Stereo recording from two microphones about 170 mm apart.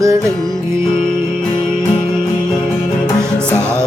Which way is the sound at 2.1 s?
25° left (ahead or behind).